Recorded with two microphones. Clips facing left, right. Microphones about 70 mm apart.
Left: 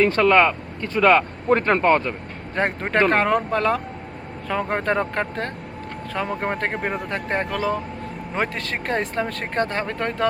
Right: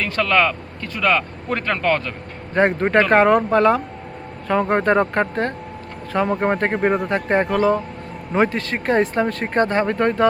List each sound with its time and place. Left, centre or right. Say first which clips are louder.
0.0 s speech: left 3 dB; left
2.6 s speech: right 4 dB; centre